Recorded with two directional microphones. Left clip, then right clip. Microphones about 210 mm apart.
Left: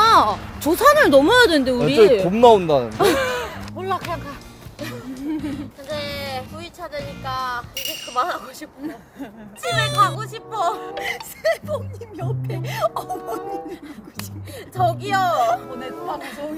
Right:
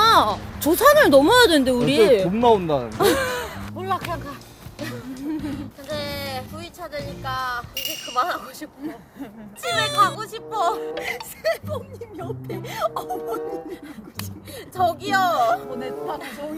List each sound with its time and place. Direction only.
0.0 s speech: 5° left (ahead or behind)
2.3 s speech: 50° left (ahead or behind)
3.0 s a sound: 15° left (ahead or behind)
3.8 s music: centre (ahead or behind)
4.1 s speech: centre (ahead or behind)
4.8 s music: centre (ahead or behind)
5.4 s speech: centre (ahead or behind)
8.8 s speech: 15° left (ahead or behind)
9.6 s speech: centre (ahead or behind)
11.0 s speech: 15° left (ahead or behind)
14.8 s speech: 5° right (ahead or behind)
15.4 s speech: 10° left (ahead or behind)
16.2 s speech: centre (ahead or behind)